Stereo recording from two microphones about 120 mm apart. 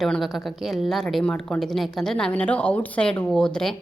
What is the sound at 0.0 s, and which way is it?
A woman's voice, centre (ahead or behind).